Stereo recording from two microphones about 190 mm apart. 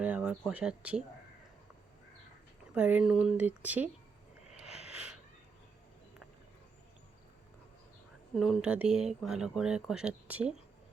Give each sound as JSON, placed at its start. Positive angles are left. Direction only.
{"t": 0.0, "sound": "speech", "side_deg": -5}
{"t": 2.7, "sound": "speech", "side_deg": -5}
{"t": 8.4, "sound": "speech", "side_deg": -5}